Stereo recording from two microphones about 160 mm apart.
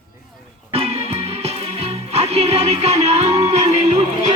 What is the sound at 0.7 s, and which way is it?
Music, 40° right (ahead or behind).